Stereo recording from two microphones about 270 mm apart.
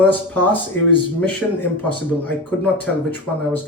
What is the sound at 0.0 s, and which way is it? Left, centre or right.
Speech, centre.